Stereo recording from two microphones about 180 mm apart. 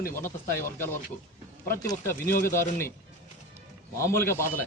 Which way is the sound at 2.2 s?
55° left (ahead or behind).